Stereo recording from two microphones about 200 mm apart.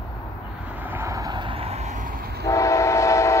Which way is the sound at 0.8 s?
10° right (ahead or behind).